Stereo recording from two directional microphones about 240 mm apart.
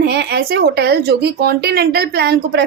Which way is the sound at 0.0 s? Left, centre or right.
Right.